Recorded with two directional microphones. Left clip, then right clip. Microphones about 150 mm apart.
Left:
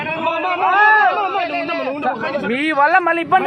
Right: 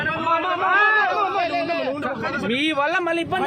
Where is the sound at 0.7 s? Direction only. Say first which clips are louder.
Left 5 dB; 5° left (ahead or behind).